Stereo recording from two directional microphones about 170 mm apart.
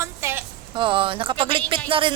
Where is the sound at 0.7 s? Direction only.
30° right (ahead or behind).